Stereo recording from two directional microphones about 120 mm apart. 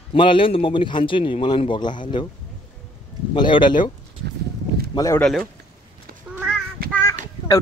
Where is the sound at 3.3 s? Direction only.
40° left (ahead or behind).